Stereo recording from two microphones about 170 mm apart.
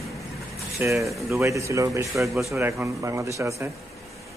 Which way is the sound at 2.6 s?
15° right (ahead or behind).